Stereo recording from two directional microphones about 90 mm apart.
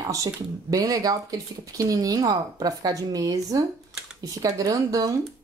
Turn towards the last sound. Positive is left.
turn(degrees=-40)  # may be behind; listen again after turning